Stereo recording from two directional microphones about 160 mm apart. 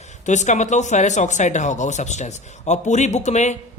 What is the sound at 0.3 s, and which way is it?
A man's voice, 50° left (ahead or behind).